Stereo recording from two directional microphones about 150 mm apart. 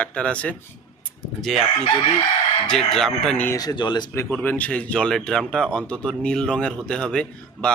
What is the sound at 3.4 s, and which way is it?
Speech, 20° left (ahead or behind).